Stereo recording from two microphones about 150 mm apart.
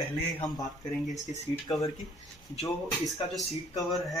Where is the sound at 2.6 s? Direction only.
Centre (ahead or behind).